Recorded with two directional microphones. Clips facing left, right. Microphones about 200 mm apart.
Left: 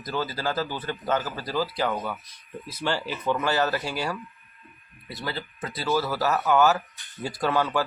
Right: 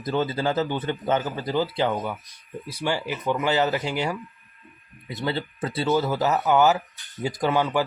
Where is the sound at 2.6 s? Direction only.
15° right (ahead or behind).